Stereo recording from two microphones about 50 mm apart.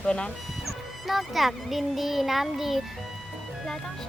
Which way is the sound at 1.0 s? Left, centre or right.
Centre.